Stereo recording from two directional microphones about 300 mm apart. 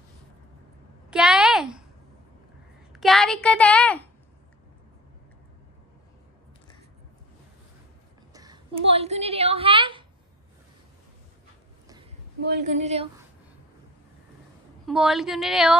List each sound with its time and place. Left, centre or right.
1.1 s a sound: centre
2.9 s a child's voice: centre
8.3 s a woman's voice: centre
12.4 s a woman's voice: right
14.9 s a woman's voice: centre